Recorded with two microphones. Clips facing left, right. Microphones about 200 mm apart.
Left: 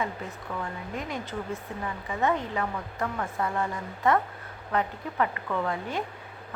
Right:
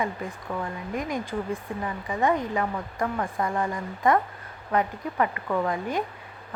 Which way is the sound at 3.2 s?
30° right (ahead or behind).